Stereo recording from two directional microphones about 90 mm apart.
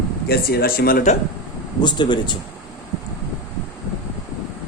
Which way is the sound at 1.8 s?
55° left (ahead or behind).